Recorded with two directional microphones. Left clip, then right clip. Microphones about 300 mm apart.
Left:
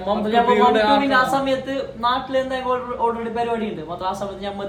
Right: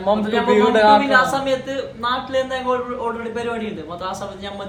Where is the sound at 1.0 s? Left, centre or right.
Centre.